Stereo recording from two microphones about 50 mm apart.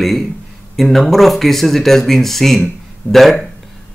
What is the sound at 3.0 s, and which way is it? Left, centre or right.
Speech, left.